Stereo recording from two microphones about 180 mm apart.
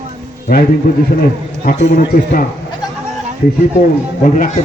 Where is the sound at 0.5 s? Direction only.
50° left (ahead or behind).